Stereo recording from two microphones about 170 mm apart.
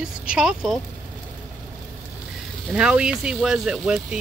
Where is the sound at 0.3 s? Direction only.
5° right (ahead or behind).